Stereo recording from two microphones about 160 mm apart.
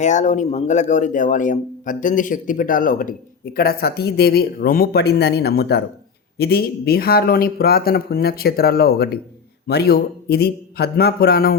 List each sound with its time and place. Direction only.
0.0 s a man's voice: 50° left (ahead or behind); by 11.5 s 80° left